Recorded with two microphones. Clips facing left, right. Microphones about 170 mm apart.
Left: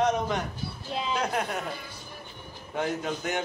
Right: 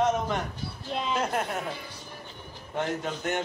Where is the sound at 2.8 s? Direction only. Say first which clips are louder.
Left 1 dB; centre (ahead or behind).